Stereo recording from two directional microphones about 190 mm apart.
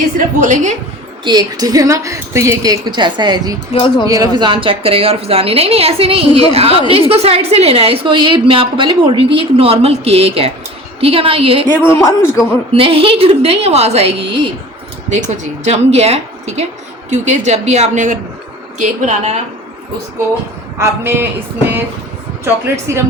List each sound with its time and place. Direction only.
0.3 s a woman's voice: 40° right (ahead or behind)
1.2 s a woman's voice: 20° right (ahead or behind)
3.7 s speech: 25° left (ahead or behind)
4.0 s a woman's voice: 20° right (ahead or behind)
11.9 s a man's voice: 15° left (ahead or behind)
12.7 s a woman's voice: 30° right (ahead or behind)
20.7 s speech: 10° right (ahead or behind)